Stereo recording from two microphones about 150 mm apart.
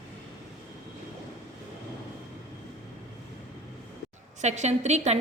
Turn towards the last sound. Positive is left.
turn(degrees=-50)  # may be behind; listen again after turning